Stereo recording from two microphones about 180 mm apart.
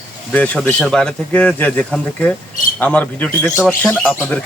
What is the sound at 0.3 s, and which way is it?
Speech, 10° left (ahead or behind).